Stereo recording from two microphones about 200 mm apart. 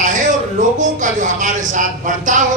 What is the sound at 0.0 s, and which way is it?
Speech, 40° right (ahead or behind).